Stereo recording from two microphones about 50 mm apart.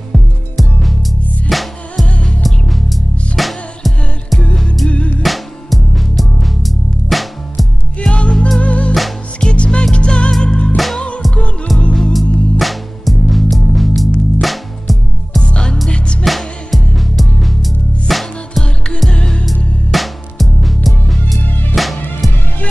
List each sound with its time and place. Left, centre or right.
0.6 s music: centre
4.8 s music: left
5.2 s music: centre
8.0 s music: left
11.9 s music: centre
15.4 s music: centre
16.3 s music: centre